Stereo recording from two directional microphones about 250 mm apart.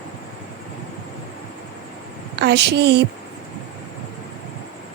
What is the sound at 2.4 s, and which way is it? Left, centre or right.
Speech, right.